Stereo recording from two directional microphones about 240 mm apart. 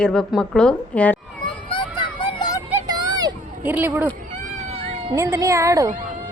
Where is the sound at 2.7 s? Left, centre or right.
Centre.